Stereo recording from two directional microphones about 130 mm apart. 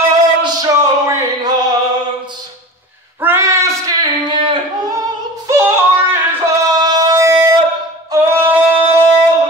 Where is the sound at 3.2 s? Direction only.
20° right (ahead or behind).